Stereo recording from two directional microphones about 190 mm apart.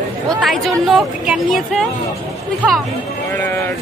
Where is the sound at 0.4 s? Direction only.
Centre (ahead or behind).